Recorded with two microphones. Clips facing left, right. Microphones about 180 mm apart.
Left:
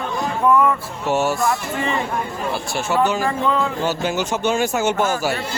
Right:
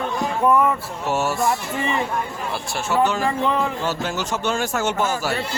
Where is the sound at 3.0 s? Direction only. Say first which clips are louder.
Even; centre (ahead or behind).